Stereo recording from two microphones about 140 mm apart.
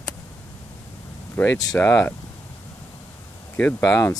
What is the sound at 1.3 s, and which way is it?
Speech, 15° left (ahead or behind).